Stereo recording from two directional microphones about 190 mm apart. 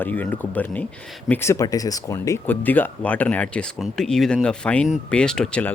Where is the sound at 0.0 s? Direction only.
10° left (ahead or behind).